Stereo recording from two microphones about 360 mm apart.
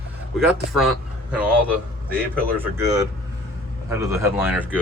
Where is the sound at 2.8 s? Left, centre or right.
Centre.